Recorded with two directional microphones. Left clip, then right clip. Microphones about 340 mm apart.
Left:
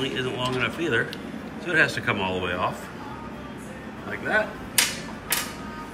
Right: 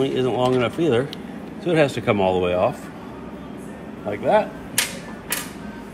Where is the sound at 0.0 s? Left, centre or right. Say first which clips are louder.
Right 6 dB; centre.